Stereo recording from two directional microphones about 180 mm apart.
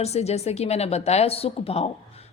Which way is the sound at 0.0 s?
35° left (ahead or behind).